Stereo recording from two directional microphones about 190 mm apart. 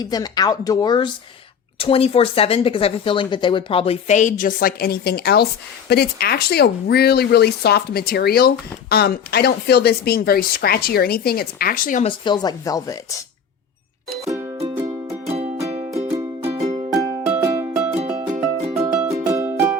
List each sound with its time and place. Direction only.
0.0 s speech: 20° left (ahead or behind); by 12.0 s 45° left (ahead or behind)
12.0 s speech: 25° left (ahead or behind)
15.3 s music: 35° right (ahead or behind)
16.9 s music: 20° right (ahead or behind)